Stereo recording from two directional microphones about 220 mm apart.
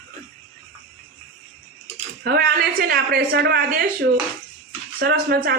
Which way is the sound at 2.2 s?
45° right (ahead or behind).